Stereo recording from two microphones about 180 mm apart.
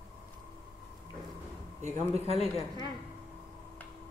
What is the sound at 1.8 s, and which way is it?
Speech, 40° right (ahead or behind).